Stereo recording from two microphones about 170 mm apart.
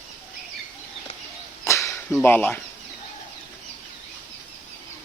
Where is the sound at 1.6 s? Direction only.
15° left (ahead or behind).